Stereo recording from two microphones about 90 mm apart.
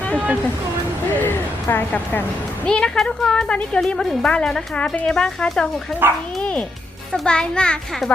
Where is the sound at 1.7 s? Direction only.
20° left (ahead or behind).